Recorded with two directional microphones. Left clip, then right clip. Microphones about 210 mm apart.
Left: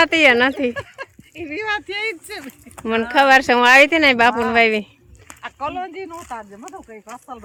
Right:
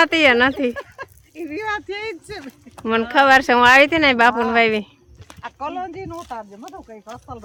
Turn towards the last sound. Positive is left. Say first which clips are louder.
# left 1 dB
turn(degrees=5)  # may be behind; listen again after turning